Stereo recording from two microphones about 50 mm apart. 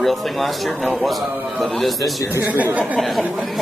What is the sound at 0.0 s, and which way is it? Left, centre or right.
A man's voice, centre.